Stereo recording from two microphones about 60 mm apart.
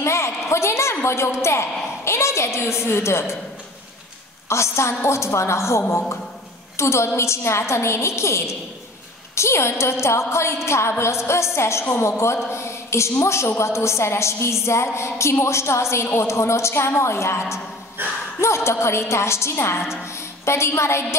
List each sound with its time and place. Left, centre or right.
0.0 s a sound: left
1.4 s a woman's voice: left
4.5 s a woman's voice: left
18.0 s speech: right
18.4 s a woman's voice: left